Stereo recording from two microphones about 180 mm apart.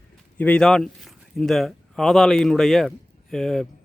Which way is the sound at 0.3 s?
10° left (ahead or behind).